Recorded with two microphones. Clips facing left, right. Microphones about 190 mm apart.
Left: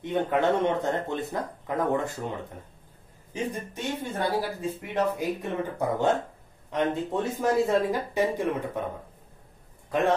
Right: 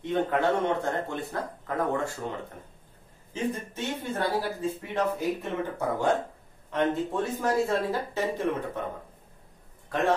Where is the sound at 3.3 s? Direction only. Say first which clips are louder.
Right 1 dB; 15° left (ahead or behind).